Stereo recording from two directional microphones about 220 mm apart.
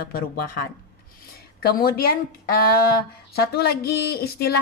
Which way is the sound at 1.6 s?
45° left (ahead or behind).